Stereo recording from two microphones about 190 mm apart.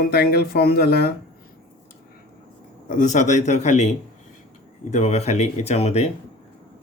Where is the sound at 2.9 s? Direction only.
40° left (ahead or behind).